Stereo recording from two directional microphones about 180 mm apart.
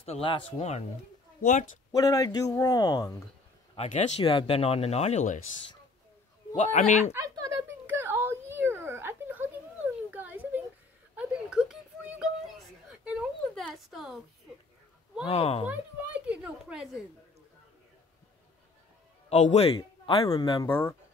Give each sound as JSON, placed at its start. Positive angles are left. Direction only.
{"t": 0.0, "sound": "speech", "side_deg": 30}
{"t": 2.0, "sound": "speech", "side_deg": 20}
{"t": 3.7, "sound": "speech", "side_deg": 40}
{"t": 6.5, "sound": "speech", "side_deg": 40}
{"t": 7.2, "sound": "a sound", "side_deg": -15}
{"t": 15.2, "sound": "speech", "side_deg": 35}
{"t": 15.6, "sound": "a sound", "side_deg": -10}
{"t": 19.2, "sound": "a man's voice", "side_deg": 40}
{"t": 20.2, "sound": "speech", "side_deg": 20}